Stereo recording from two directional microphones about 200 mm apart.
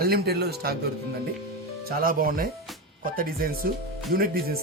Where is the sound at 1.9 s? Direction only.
45° right (ahead or behind).